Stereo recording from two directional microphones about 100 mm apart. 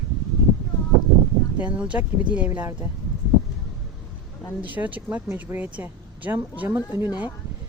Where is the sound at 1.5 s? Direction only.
15° right (ahead or behind).